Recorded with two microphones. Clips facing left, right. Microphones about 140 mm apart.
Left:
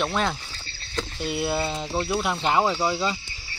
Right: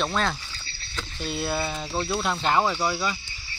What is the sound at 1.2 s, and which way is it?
Speech, 15° left (ahead or behind).